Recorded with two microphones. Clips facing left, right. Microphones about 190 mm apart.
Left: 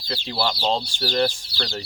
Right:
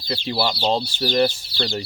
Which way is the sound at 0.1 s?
5° right (ahead or behind).